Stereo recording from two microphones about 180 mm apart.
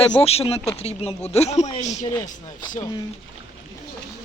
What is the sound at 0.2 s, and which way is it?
Speech, 35° left (ahead or behind).